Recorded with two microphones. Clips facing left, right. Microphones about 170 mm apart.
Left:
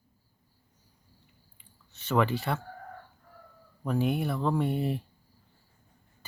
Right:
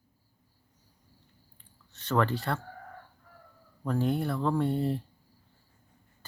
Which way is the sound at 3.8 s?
10° left (ahead or behind).